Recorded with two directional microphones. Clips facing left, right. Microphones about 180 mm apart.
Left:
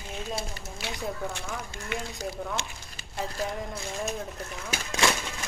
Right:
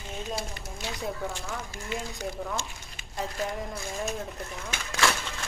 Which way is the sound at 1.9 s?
65° left (ahead or behind).